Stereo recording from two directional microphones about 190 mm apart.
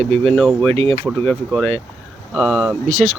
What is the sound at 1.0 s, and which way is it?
Speech, 5° left (ahead or behind).